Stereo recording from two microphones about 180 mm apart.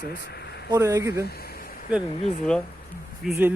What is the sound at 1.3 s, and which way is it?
Speech, 60° left (ahead or behind).